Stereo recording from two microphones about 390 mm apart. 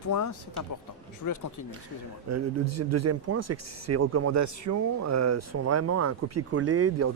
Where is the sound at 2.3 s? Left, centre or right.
Right.